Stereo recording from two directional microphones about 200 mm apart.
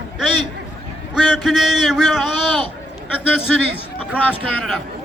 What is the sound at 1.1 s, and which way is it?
A man's voice, centre (ahead or behind).